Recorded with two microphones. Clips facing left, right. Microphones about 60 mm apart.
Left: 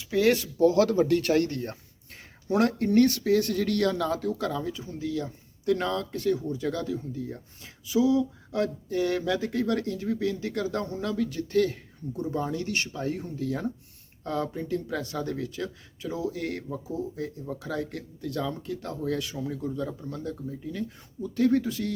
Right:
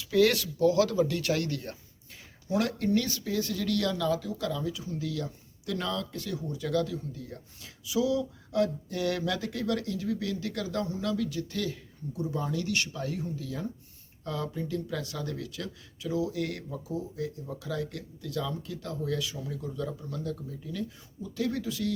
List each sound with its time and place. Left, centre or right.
0.0 s speech: left
0.6 s speech: left
2.9 s speech: left
13.1 s speech: left
14.3 s speech: left
19.7 s speech: left
21.3 s speech: left